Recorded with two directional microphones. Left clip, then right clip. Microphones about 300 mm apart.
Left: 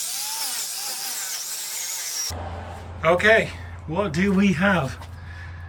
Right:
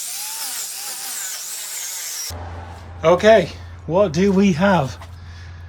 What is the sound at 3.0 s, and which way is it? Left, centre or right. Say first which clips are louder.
Speech: right 5 dB; centre.